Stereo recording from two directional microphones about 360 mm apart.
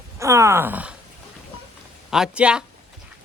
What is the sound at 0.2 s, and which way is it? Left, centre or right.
Speech, centre.